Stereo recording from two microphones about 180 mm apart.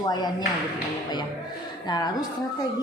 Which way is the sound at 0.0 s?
25° left (ahead or behind).